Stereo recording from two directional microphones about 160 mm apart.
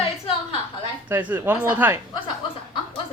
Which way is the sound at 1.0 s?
10° right (ahead or behind).